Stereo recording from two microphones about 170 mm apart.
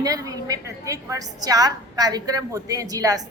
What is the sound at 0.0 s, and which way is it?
A woman's voice, 20° right (ahead or behind).